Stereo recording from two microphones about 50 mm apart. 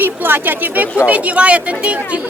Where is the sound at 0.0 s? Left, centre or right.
Right.